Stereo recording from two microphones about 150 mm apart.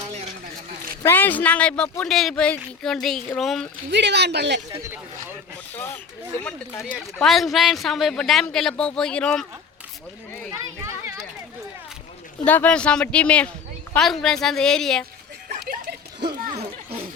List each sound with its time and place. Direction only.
1.0 s speech: 10° left (ahead or behind)
4.1 s speech: 90° right
5.7 s speech: 15° left (ahead or behind)
6.9 s speech: centre (ahead or behind)
10.5 s a child's voice: 20° right (ahead or behind)
12.5 s speech: 10° left (ahead or behind)
15.7 s a sound: 90° right